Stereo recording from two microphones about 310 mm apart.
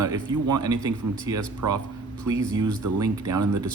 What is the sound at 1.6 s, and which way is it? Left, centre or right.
Speech, right.